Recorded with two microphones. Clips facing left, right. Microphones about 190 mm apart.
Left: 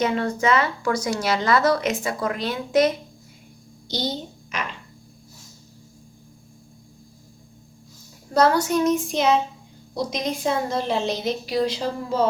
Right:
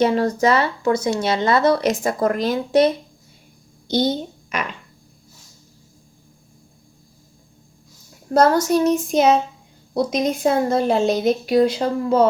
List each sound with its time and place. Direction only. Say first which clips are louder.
0.0 s speech: right 5 dB; 35° right (ahead or behind)
1.9 s a woman's voice: right 6 dB; 45° right (ahead or behind)
3.8 s a child's voice: right 8 dB; 55° right (ahead or behind)
8.3 s a child's voice: right 3 dB; 45° right (ahead or behind)
9.9 s a woman's voice: right 6 dB; 55° right (ahead or behind)